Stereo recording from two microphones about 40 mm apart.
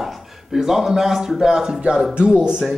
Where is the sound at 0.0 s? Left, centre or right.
Centre.